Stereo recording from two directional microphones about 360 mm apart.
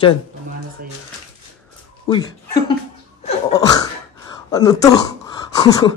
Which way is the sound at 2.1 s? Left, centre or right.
Centre.